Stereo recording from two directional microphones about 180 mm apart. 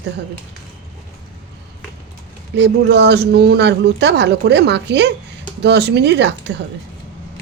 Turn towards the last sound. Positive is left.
turn(degrees=-70)  # may be behind; listen again after turning